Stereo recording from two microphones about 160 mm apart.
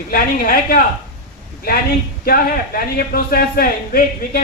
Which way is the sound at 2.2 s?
65° left (ahead or behind).